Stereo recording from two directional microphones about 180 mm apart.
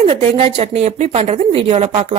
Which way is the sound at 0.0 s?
35° right (ahead or behind).